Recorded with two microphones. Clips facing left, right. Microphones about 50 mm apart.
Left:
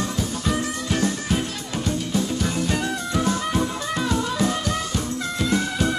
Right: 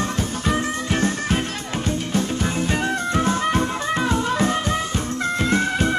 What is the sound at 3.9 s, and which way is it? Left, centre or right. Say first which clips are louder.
Music: right 3 dB; right.